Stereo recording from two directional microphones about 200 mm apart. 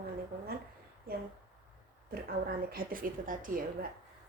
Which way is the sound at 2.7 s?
45° right (ahead or behind).